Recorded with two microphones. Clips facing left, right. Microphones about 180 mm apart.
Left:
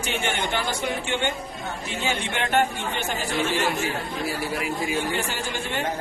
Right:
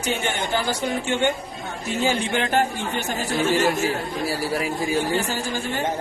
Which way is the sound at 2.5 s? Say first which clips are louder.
Right 1 dB; 40° right (ahead or behind).